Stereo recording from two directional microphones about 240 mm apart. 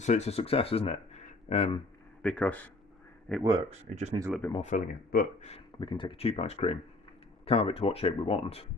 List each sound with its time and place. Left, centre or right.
0.0 s speech: left
2.2 s speech: centre
3.7 s speech: right
4.5 s speech: left
5.5 s speech: left